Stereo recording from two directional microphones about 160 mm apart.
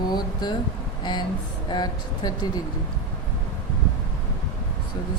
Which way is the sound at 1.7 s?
25° left (ahead or behind).